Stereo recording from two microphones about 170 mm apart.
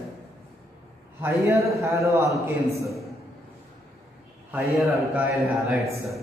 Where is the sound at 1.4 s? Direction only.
15° right (ahead or behind).